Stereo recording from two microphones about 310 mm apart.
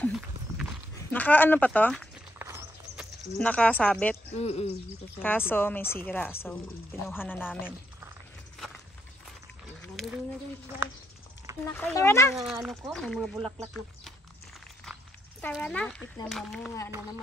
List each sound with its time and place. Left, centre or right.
0.6 s a sound: centre
2.4 s horse: centre
3.3 s speech: centre
4.4 s speech: centre
5.2 s a woman's voice: centre
9.8 s a sound: centre
11.6 s speech: centre
15.4 s speech: centre